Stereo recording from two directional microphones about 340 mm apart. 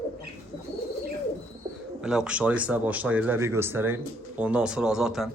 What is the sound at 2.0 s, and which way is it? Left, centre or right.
A man's voice, centre.